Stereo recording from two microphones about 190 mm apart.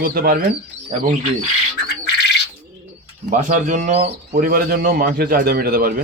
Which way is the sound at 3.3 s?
40° right (ahead or behind).